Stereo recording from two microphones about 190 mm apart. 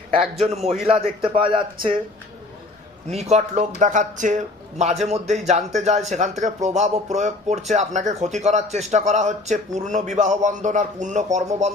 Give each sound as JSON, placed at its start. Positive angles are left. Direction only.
{"t": 0.2, "sound": "a man's voice", "side_deg": 0}
{"t": 0.5, "sound": "speech", "side_deg": -35}
{"t": 3.1, "sound": "speech", "side_deg": -35}